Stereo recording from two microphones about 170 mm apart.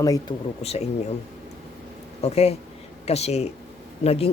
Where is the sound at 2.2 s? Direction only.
35° left (ahead or behind).